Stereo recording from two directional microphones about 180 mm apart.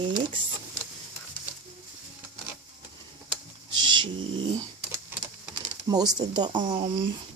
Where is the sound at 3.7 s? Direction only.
25° right (ahead or behind).